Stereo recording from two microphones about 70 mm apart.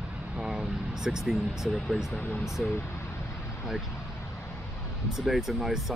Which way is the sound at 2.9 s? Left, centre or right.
Left.